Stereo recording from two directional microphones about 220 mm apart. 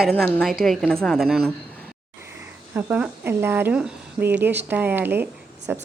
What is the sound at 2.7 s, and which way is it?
Speech, 10° right (ahead or behind).